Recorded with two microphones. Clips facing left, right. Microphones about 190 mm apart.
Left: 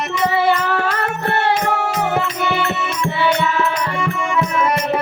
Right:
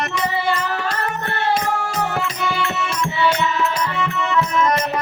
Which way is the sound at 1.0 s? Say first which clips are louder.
Left 4 dB; 65° left (ahead or behind).